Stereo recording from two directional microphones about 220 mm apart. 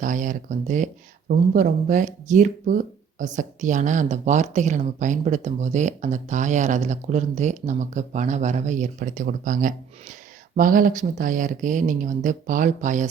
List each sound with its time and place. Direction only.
0.0 s speech: 35° right (ahead or behind)